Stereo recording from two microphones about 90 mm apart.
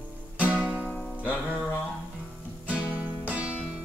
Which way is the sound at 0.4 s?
15° right (ahead or behind).